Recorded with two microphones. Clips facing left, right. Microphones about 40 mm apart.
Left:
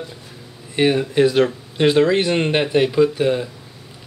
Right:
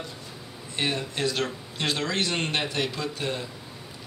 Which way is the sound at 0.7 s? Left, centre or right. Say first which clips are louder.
Left 12 dB; left.